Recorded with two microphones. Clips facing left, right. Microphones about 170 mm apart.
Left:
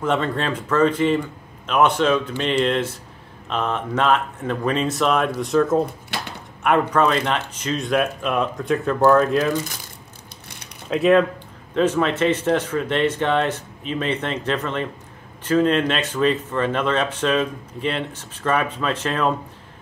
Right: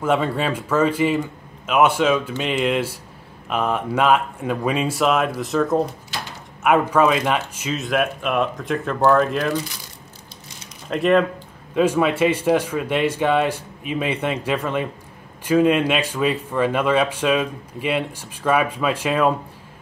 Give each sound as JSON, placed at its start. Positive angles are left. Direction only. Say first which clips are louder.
{"t": 0.0, "sound": "speech", "louder": "right 2 dB", "side_deg": -10}
{"t": 6.1, "sound": "a sound", "louder": "left 3 dB", "side_deg": 60}
{"t": 6.6, "sound": "speech", "louder": "right 2 dB", "side_deg": -5}
{"t": 10.9, "sound": "speech", "louder": "left 1 dB", "side_deg": 0}
{"t": 11.7, "sound": "speech", "louder": "right 1 dB", "side_deg": -10}